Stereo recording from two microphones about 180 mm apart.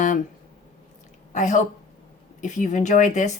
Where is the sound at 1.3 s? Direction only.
40° left (ahead or behind).